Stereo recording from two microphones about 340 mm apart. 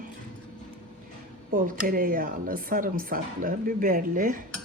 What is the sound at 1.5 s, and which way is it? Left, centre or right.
Speech, right.